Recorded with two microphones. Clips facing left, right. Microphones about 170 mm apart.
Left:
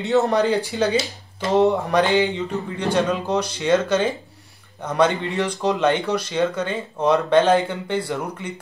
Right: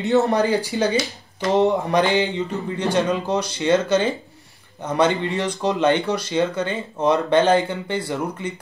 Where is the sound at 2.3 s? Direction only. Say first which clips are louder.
Right 1 dB; 65° left (ahead or behind).